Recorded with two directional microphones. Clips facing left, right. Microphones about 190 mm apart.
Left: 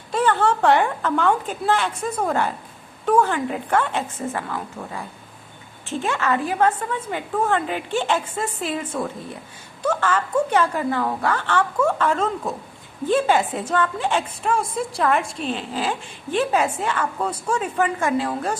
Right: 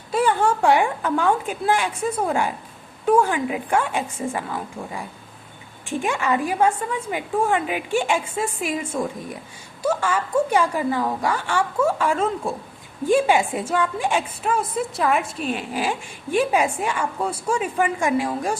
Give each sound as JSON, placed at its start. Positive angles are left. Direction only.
{"t": 0.1, "sound": "a woman's voice", "side_deg": -10}